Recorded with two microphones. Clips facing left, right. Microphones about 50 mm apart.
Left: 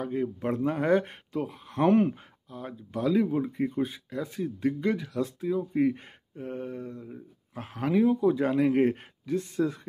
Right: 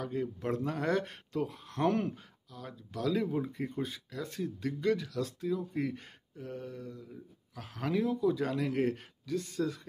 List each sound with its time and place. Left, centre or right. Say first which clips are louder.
0.0 s speech: left 5 dB; left
1.3 s speech: left 2 dB; centre
1.7 s speech: left 9 dB; left
3.1 s speech: left 6 dB; centre